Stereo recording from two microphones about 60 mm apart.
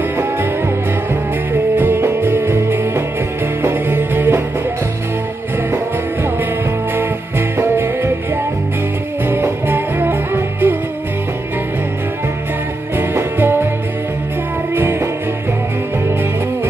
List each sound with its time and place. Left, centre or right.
1.5 s music: right
3.7 s music: right
7.0 s music: right
9.3 s music: right
12.9 s music: right
14.8 s music: right